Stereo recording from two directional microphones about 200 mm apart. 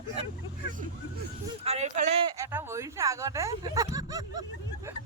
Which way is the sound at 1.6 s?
35° right (ahead or behind).